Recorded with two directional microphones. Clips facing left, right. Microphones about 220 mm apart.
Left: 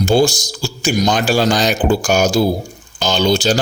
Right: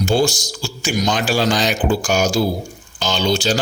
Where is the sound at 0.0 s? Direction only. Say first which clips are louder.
Left 4 dB; 40° left (ahead or behind).